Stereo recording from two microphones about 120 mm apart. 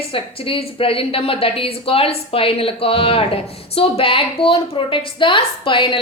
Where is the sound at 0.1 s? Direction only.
50° left (ahead or behind).